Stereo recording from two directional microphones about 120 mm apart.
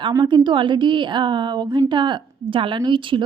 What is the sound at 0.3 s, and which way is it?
A woman's voice, 40° right (ahead or behind).